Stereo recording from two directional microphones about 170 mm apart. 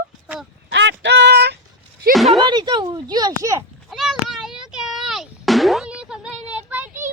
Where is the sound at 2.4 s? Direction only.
25° right (ahead or behind).